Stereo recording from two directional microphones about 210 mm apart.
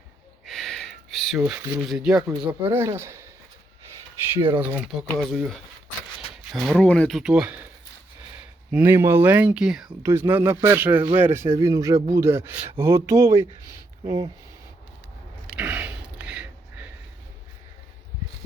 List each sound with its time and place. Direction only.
0.4 s a sound: centre (ahead or behind)
2.1 s speech: 20° right (ahead or behind)
4.4 s speech: 25° right (ahead or behind)
4.6 s speech: 5° right (ahead or behind)
8.7 s speech: 10° right (ahead or behind)
15.5 s a sound: 5° right (ahead or behind)